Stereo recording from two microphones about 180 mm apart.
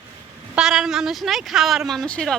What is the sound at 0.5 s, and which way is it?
Speech, 5° right (ahead or behind).